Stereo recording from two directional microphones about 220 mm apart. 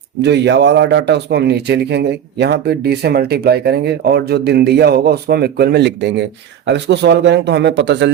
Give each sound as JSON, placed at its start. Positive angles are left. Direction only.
{"t": 0.2, "sound": "speech", "side_deg": -50}